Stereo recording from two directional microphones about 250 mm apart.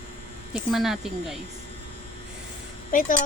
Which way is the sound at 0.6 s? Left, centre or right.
Centre.